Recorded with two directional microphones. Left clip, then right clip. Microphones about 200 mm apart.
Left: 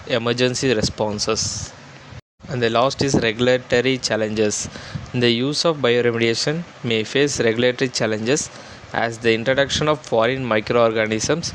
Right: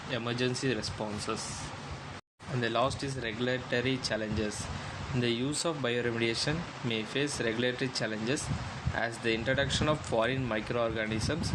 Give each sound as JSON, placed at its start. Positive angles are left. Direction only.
{"t": 0.1, "sound": "speech", "side_deg": 50}
{"t": 2.6, "sound": "speech", "side_deg": 45}